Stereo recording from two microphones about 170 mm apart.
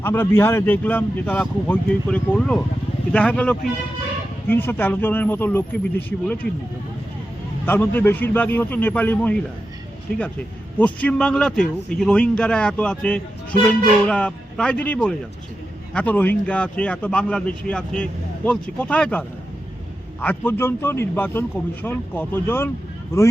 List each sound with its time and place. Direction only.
0.0 s speech: 10° left (ahead or behind)
7.6 s speech: 10° left (ahead or behind)
10.8 s a man's voice: 10° left (ahead or behind)
20.2 s speech: 10° left (ahead or behind)